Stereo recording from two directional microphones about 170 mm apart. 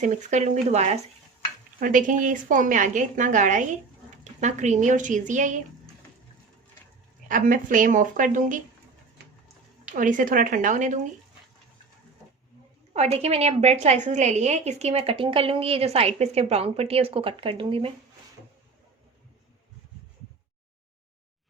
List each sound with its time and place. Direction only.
0.0 s a woman's voice: 45° right (ahead or behind)
1.8 s a woman's voice: 50° right (ahead or behind)
7.3 s a woman's voice: 50° right (ahead or behind)
9.9 s a woman's voice: 50° right (ahead or behind)
12.9 s a woman's voice: 40° right (ahead or behind)